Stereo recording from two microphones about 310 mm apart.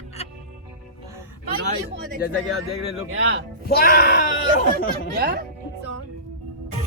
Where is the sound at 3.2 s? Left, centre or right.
Right.